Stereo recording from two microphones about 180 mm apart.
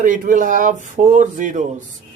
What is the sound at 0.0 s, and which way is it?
Speech, 50° right (ahead or behind).